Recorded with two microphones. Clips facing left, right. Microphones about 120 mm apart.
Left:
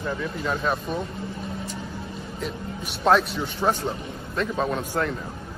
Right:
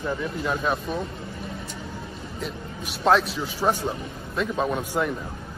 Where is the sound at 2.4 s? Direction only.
Centre (ahead or behind).